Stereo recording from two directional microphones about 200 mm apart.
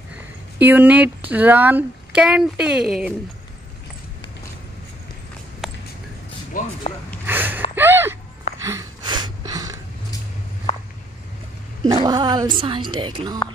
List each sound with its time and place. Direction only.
0.6 s speech: 10° right (ahead or behind)
5.6 s a sound: centre (ahead or behind)
6.5 s speech: 40° left (ahead or behind)
7.2 s gasp: 10° right (ahead or behind)
7.7 s a sound: 10° right (ahead or behind)
11.8 s speech: 20° right (ahead or behind)